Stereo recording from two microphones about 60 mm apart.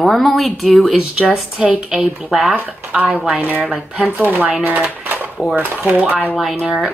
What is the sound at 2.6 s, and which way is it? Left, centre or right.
Speech, right.